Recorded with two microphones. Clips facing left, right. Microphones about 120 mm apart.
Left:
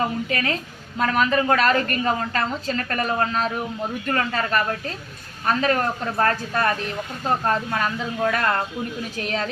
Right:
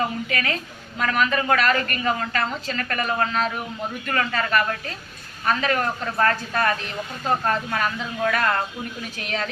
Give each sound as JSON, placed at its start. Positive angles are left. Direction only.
{"t": 0.3, "sound": "a woman's voice", "side_deg": 30}